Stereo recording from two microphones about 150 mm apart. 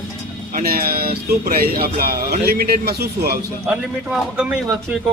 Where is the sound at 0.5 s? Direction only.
85° right.